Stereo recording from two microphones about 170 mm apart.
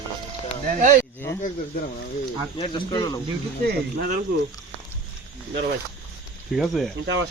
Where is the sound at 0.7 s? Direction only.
50° right (ahead or behind).